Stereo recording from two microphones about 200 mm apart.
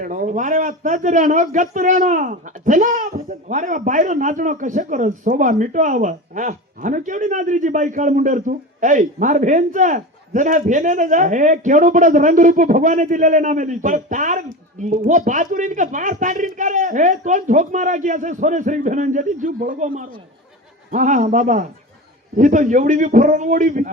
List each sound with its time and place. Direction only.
0.0 s a man's voice: 40° right (ahead or behind)